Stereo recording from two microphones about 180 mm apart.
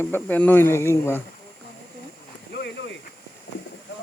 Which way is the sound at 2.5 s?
65° left (ahead or behind).